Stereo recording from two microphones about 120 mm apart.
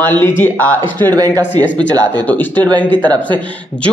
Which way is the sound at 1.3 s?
15° left (ahead or behind).